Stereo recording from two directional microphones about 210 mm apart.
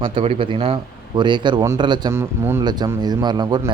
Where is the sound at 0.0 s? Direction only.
25° right (ahead or behind).